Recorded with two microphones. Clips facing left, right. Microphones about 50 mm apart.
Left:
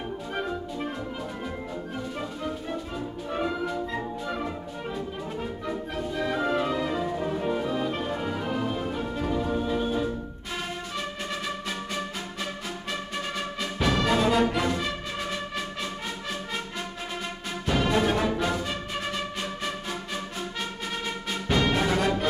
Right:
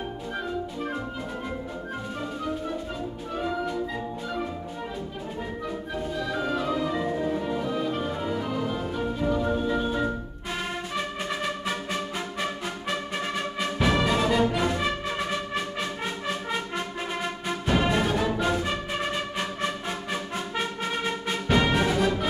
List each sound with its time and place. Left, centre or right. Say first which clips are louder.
6.1 s music: left 3 dB; left
7.2 s music: right 2 dB; centre
7.4 s music: left 1 dB; centre
8.5 s music: even; left
9.4 s music: right 1 dB; centre
12.4 s music: right 3 dB; centre
14.8 s music: right 3 dB; centre
17.5 s music: right 1 dB; centre